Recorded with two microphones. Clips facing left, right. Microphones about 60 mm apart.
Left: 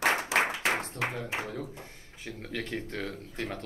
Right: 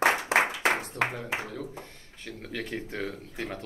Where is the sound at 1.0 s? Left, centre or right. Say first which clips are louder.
Right 4 dB; right.